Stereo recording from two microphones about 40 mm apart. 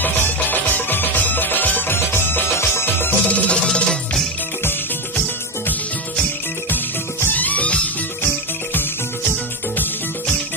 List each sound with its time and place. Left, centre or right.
0.5 s music: left
1.9 s music: left
3.3 s music: left
3.7 s music: left
5.1 s music: left
7.3 s music: left